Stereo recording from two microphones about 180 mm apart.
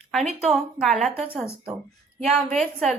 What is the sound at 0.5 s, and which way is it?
Speech, centre (ahead or behind).